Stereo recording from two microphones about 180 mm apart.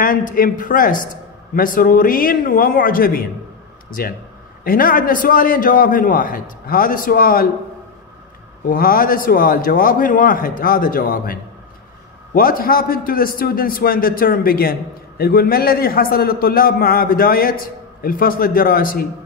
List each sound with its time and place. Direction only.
0.0 s a man's voice: 50° left (ahead or behind)
8.6 s a man's voice: 55° left (ahead or behind)
12.4 s a man's voice: 55° left (ahead or behind)